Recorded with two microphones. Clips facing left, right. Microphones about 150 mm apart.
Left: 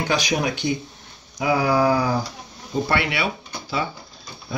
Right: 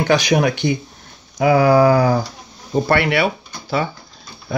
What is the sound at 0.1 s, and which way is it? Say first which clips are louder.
Speech: right 8 dB; 65° right (ahead or behind).